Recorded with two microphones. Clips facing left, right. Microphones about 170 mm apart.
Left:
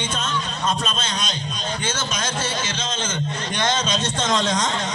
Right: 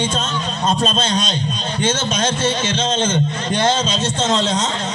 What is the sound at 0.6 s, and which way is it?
Speech, 30° right (ahead or behind).